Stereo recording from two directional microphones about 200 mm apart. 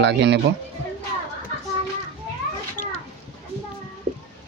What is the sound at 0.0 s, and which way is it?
Speech, 60° right (ahead or behind).